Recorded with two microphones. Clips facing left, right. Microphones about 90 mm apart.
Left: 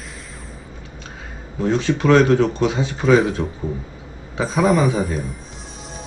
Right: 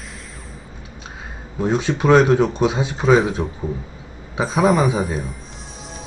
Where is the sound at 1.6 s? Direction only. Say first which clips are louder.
Even; 15° right (ahead or behind).